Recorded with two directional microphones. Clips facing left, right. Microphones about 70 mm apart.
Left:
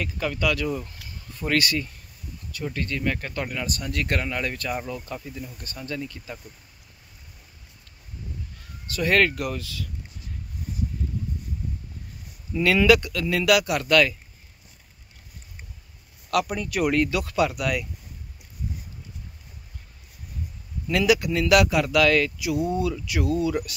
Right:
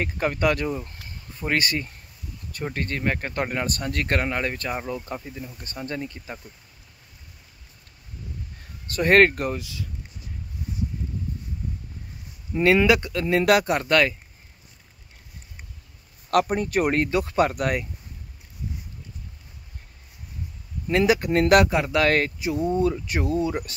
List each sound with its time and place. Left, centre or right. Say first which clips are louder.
0.0 s speech: right 3 dB; right
8.9 s speech: right 4 dB; right
9.5 s speech: right 2 dB; right
12.5 s speech: even; right
16.3 s speech: right 3 dB; right
20.8 s speech: right 1 dB; right